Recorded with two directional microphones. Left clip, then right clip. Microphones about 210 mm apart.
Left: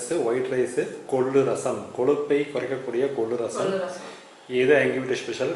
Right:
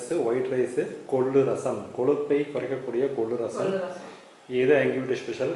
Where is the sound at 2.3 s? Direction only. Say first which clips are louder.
Left 2 dB; 5° right (ahead or behind).